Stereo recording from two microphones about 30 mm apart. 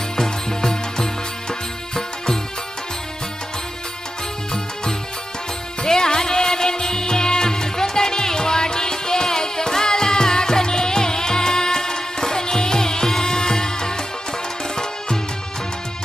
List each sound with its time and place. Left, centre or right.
0.2 s music: centre
5.8 s music: left